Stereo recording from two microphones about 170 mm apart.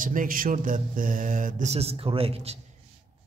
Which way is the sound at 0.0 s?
50° right (ahead or behind).